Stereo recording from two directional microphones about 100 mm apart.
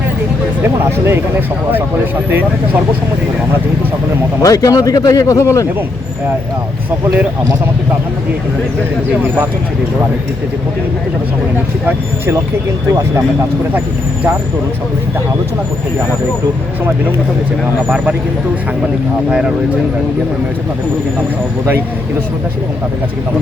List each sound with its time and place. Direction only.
0.9 s speech: 25° right (ahead or behind)
4.4 s speech: 35° left (ahead or behind)
11.9 s speech: 20° right (ahead or behind)
17.8 s speech: 15° right (ahead or behind)